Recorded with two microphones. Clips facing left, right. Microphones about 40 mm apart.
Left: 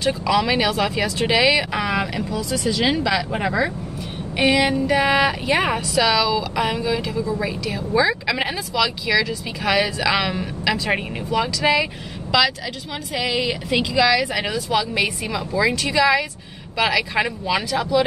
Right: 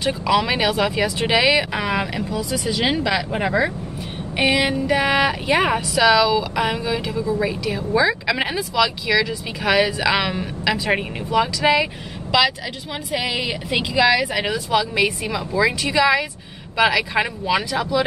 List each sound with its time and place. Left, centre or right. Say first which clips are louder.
0.0 s speech: even; centre
15.0 s speech: right 1 dB; centre
15.5 s speech: right 1 dB; centre